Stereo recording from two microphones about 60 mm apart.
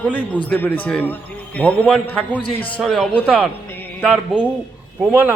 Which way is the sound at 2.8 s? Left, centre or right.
Centre.